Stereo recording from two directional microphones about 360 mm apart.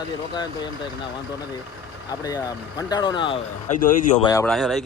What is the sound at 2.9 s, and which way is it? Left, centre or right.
Speech, centre.